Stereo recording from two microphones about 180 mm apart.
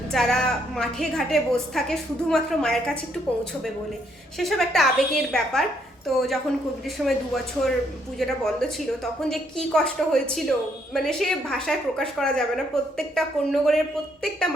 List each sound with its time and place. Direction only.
0.1 s a woman's voice: centre (ahead or behind)
4.4 s a woman's voice: centre (ahead or behind)